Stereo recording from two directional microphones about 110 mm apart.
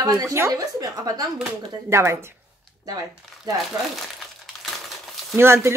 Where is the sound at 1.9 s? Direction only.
25° right (ahead or behind).